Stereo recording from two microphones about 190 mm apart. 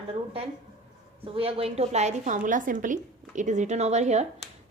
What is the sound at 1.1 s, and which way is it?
A woman's voice, 30° right (ahead or behind).